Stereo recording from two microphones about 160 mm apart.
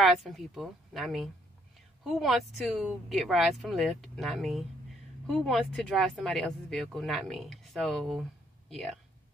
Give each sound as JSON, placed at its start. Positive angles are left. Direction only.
{"t": 0.0, "sound": "speech", "side_deg": 0}